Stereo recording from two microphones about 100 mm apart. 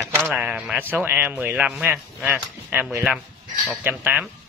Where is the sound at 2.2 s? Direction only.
20° right (ahead or behind).